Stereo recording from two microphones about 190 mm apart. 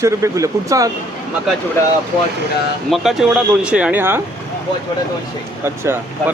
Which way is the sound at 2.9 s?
Centre (ahead or behind).